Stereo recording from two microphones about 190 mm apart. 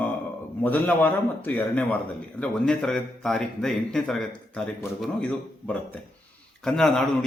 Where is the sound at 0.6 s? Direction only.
10° left (ahead or behind).